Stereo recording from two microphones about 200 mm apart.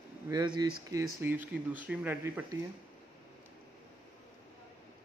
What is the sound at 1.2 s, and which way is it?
Speech, 10° right (ahead or behind).